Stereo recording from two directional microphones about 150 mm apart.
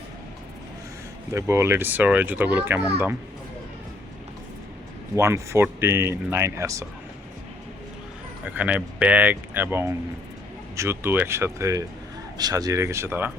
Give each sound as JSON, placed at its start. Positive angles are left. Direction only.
{"t": 1.3, "sound": "a child's voice", "side_deg": -20}
{"t": 5.1, "sound": "a child's voice", "side_deg": -20}
{"t": 8.4, "sound": "a child's voice", "side_deg": -10}